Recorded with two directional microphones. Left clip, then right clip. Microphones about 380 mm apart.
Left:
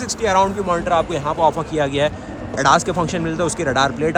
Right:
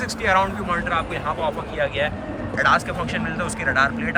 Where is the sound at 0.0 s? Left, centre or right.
Centre.